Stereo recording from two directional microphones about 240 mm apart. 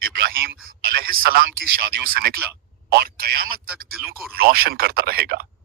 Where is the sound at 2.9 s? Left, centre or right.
Right.